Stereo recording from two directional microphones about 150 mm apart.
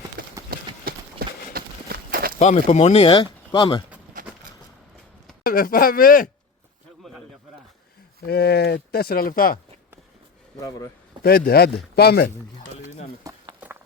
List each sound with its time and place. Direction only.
0.2 s clip-clop: 75° right (ahead or behind)
1.2 s clip-clop: 90° right
1.5 s walk: 80° right
2.4 s speech: 50° left (ahead or behind); by 3.8 s 30° left (ahead or behind)
4.1 s a sound: 65° right (ahead or behind)
5.5 s speech: 70° left (ahead or behind)
8.3 s speech: 90° left; by 9.6 s 75° left (ahead or behind)
10.6 s speech: 20° left (ahead or behind)
11.2 s speech: 90° left
13.2 s chopping: 30° right (ahead or behind)